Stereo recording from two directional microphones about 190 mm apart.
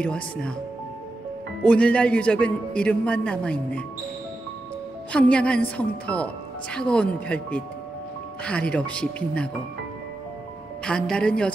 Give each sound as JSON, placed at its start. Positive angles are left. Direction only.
{"t": 0.0, "sound": "a man's voice", "side_deg": 5}
{"t": 1.6, "sound": "a man's voice", "side_deg": 5}
{"t": 5.1, "sound": "a woman's voice", "side_deg": 5}
{"t": 10.9, "sound": "a man's voice", "side_deg": 5}